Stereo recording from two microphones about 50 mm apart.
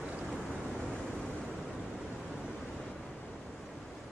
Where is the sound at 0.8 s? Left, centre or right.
Left.